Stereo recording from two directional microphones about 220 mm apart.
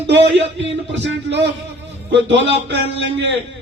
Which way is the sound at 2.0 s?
50° right (ahead or behind).